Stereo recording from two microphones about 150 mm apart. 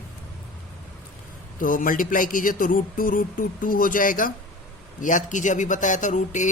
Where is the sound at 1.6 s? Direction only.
65° left (ahead or behind).